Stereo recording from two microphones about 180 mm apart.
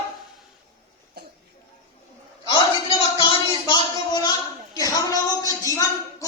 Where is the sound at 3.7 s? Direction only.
25° left (ahead or behind).